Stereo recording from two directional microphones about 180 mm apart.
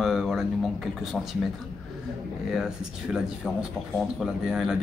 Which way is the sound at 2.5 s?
5° right (ahead or behind).